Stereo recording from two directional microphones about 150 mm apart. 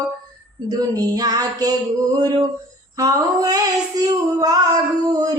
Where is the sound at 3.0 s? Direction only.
25° right (ahead or behind).